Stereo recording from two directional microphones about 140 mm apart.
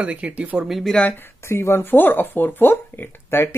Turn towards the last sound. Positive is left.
turn(degrees=15)  # may be behind; listen again after turning